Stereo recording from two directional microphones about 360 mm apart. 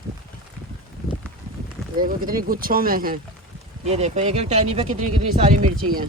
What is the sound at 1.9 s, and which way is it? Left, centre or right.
Speech, right.